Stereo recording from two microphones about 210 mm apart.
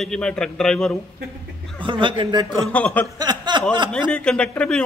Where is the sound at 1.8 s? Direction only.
25° right (ahead or behind).